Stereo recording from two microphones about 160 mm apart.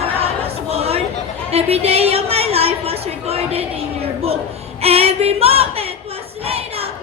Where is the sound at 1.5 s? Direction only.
40° right (ahead or behind).